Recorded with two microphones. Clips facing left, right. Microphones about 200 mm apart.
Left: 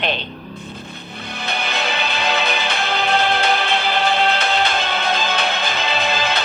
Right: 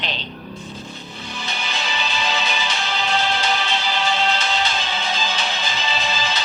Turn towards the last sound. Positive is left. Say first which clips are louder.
# left 4 dB
turn(degrees=60)  # may be behind; listen again after turning